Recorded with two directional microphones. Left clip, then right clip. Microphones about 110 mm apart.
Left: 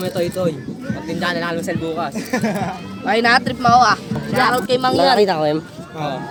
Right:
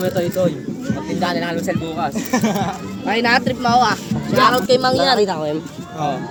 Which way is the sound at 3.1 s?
55° left (ahead or behind).